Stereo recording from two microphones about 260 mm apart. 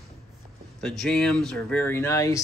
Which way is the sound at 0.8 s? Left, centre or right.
Centre.